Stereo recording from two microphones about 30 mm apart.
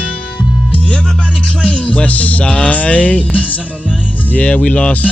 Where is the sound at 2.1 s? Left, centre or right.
Left.